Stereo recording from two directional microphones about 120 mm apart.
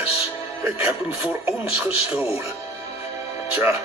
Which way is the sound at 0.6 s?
15° right (ahead or behind).